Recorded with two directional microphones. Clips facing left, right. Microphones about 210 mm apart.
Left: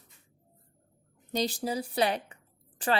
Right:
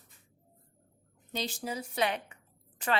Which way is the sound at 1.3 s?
40° left (ahead or behind).